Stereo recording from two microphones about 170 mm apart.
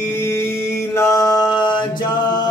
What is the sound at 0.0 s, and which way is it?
Mantra, 15° left (ahead or behind).